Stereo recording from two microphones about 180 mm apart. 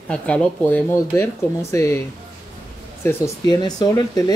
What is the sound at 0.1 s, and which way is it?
Speech, 5° left (ahead or behind).